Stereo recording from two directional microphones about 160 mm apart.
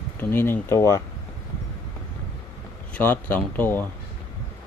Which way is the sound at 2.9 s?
10° left (ahead or behind).